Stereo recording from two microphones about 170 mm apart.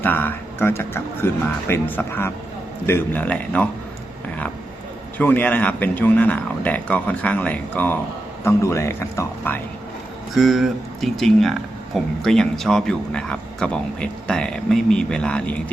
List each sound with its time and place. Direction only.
0.0 s speech: 10° left (ahead or behind)
5.1 s speech: 10° left (ahead or behind)
10.3 s speech: centre (ahead or behind)